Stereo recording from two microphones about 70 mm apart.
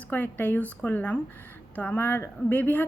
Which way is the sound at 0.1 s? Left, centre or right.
Left.